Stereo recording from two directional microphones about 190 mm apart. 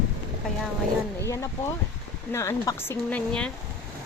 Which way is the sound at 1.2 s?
15° left (ahead or behind).